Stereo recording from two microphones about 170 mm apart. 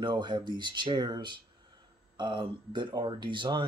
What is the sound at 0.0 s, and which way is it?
Speech, 25° right (ahead or behind).